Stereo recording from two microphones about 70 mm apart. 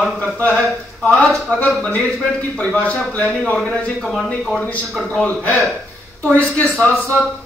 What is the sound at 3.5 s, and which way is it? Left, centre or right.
Speech, centre.